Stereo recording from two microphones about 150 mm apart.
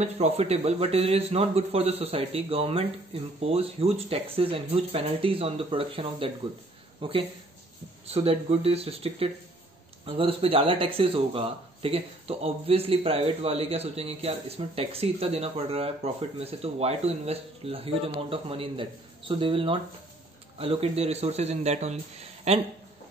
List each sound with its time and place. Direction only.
0.0 s speech: 45° right (ahead or behind)